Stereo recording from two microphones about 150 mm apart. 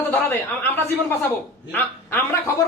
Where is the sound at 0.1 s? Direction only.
15° left (ahead or behind).